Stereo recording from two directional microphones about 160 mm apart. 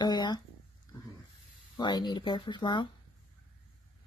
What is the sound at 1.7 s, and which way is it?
Speech, 25° left (ahead or behind).